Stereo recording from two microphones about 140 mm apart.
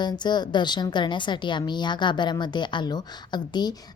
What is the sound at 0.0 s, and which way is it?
A woman's voice, 30° left (ahead or behind).